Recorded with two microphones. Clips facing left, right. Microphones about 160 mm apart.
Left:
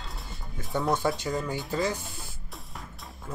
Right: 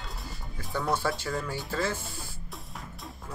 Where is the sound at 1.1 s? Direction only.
20° left (ahead or behind).